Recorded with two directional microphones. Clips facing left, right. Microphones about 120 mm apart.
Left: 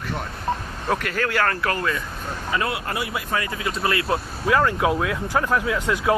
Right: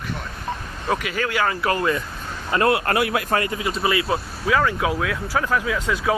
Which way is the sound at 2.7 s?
70° right (ahead or behind).